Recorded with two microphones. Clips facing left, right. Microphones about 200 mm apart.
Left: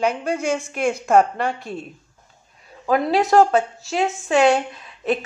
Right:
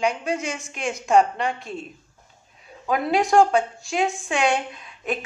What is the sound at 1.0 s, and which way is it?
Speech, 55° left (ahead or behind).